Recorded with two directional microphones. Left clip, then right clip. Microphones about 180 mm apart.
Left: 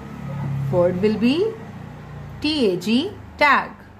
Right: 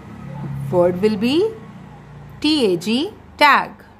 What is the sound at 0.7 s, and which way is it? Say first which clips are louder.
A woman's voice: right 2 dB; 35° right (ahead or behind).